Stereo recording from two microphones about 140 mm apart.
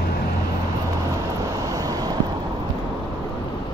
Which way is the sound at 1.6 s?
25° right (ahead or behind).